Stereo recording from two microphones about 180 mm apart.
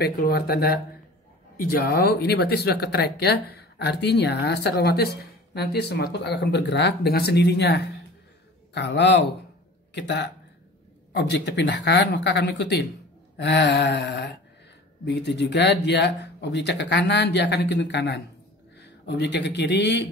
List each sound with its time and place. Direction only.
0.0 s speech: 55° left (ahead or behind)